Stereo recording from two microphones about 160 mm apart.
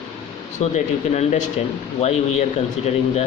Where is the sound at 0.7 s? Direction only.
45° left (ahead or behind).